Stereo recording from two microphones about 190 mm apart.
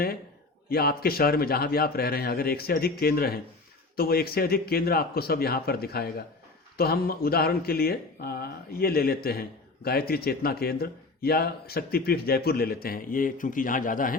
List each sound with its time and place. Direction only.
0.7 s speech: 55° left (ahead or behind)